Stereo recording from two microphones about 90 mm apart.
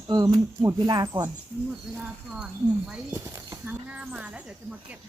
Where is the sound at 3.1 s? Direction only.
30° right (ahead or behind).